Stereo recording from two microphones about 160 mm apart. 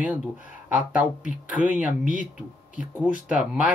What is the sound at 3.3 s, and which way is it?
Speech, 5° right (ahead or behind).